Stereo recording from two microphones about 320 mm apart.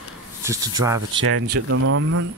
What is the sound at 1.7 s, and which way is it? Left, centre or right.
Speech, right.